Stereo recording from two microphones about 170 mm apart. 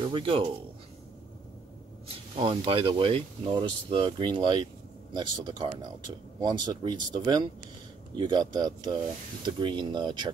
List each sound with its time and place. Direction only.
0.0 s speech: 30° right (ahead or behind)
2.4 s speech: 30° right (ahead or behind)